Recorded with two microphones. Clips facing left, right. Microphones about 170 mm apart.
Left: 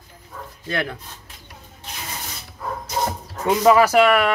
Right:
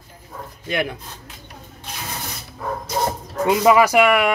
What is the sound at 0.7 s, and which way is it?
Speech, 15° right (ahead or behind).